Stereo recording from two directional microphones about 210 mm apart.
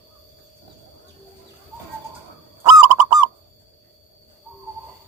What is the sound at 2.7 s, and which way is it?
Bird, 15° right (ahead or behind).